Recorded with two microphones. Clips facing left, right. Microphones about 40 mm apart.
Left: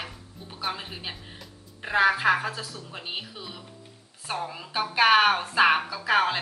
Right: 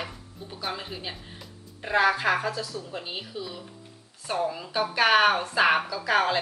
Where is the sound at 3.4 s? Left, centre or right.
Left.